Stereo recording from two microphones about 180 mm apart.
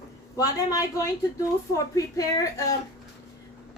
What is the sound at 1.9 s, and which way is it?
Speech, 20° left (ahead or behind).